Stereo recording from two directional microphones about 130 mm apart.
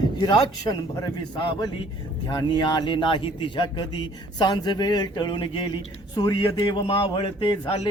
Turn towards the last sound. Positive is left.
turn(degrees=40)  # may be behind; listen again after turning